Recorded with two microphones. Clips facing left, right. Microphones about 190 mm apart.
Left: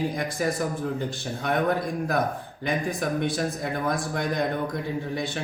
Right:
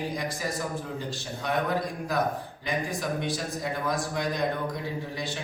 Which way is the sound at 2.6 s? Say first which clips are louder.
Left 4 dB; 55° left (ahead or behind).